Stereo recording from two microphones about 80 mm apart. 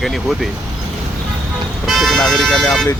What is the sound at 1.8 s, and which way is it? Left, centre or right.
Speech, centre.